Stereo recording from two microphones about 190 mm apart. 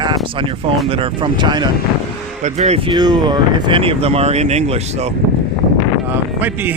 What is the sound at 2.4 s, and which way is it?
Speech, 35° right (ahead or behind).